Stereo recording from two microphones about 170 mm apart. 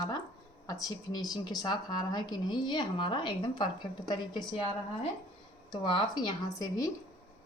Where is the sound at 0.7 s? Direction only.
20° left (ahead or behind).